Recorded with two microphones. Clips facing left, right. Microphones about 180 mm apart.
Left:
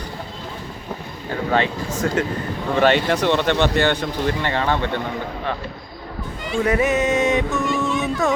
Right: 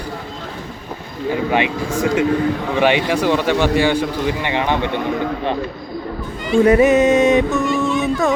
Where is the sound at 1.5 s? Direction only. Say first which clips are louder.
Right 2 dB; 10° right (ahead or behind).